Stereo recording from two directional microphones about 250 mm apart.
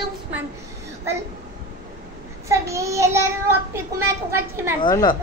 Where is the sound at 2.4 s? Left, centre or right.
Centre.